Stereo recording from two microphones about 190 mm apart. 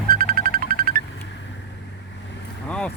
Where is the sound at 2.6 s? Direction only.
5° left (ahead or behind).